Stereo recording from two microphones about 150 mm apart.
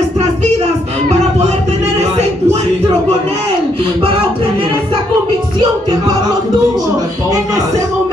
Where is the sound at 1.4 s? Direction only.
45° right (ahead or behind); by 7.6 s 25° right (ahead or behind).